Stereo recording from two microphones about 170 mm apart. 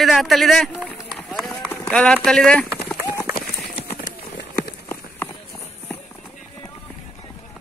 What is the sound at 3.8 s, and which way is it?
Clip-clop, 65° left (ahead or behind).